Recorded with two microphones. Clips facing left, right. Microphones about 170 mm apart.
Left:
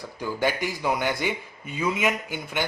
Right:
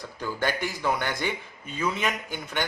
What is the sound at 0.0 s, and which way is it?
Speech, 10° left (ahead or behind).